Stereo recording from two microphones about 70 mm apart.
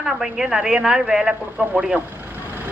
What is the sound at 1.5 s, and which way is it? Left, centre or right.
Speech, centre.